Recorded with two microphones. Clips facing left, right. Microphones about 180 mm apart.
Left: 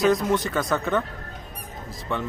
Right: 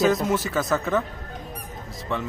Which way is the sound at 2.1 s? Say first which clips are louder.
Even; centre (ahead or behind).